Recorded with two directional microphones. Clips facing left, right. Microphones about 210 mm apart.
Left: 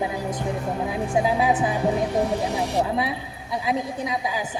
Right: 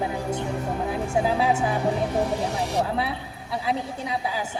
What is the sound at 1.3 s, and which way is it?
Speech, 15° left (ahead or behind).